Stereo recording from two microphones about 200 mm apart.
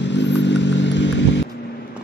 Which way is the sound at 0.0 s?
60° left (ahead or behind).